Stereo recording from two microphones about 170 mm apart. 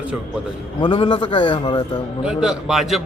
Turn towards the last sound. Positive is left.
turn(degrees=0)  # may be behind; listen again after turning